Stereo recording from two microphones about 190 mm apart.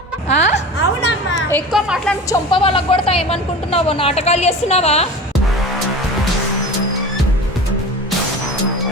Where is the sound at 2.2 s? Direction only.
25° left (ahead or behind).